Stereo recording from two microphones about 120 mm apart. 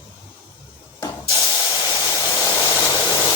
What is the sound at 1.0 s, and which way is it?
Spray, 35° left (ahead or behind).